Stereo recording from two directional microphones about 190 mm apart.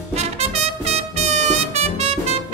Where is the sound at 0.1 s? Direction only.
35° right (ahead or behind).